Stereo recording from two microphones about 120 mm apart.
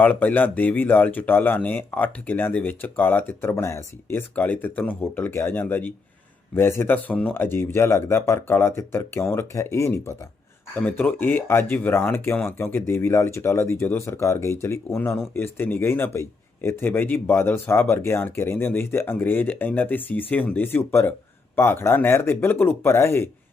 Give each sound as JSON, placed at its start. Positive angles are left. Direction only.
{"t": 0.0, "sound": "a man's voice", "side_deg": 15}